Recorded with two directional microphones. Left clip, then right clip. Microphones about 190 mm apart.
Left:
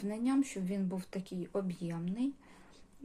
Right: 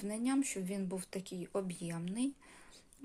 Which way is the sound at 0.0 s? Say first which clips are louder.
Left 2 dB; 20° right (ahead or behind).